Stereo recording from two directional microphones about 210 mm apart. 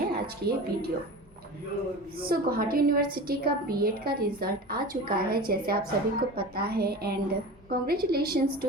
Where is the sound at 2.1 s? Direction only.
45° right (ahead or behind).